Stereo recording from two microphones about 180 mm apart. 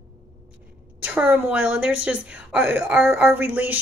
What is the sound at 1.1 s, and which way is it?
A woman's voice, 10° right (ahead or behind).